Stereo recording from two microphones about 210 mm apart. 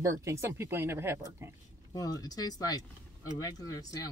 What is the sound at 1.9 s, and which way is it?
Speech, 15° left (ahead or behind).